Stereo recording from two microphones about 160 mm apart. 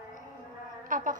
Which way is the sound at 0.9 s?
55° right (ahead or behind).